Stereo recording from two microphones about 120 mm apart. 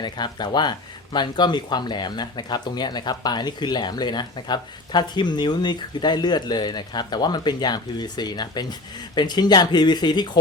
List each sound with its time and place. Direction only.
0.0 s speech: 35° left (ahead or behind)